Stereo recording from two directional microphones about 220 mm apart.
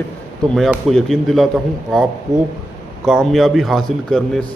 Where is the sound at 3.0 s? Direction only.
Centre (ahead or behind).